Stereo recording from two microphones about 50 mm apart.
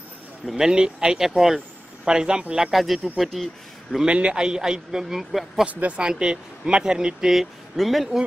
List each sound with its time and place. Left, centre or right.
0.5 s speech: centre
2.7 s speech: centre
4.0 s speech: centre
5.7 s speech: right
6.0 s speech: centre